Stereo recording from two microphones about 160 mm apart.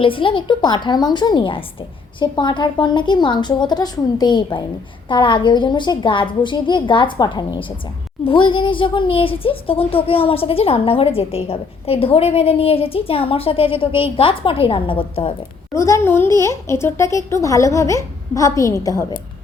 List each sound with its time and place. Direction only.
0.0 s speech: 35° left (ahead or behind)
15.7 s speech: 20° left (ahead or behind)